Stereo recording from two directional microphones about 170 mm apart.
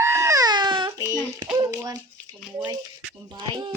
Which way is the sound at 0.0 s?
15° right (ahead or behind).